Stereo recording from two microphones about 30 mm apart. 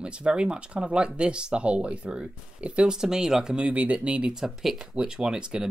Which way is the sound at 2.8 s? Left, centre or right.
Centre.